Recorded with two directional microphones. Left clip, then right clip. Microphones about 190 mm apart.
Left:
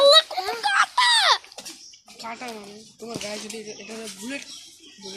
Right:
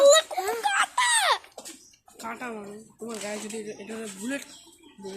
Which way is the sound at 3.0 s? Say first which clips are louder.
Left 2 dB; 45° right (ahead or behind).